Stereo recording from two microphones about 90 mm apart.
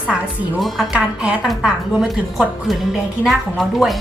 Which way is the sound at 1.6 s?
10° right (ahead or behind).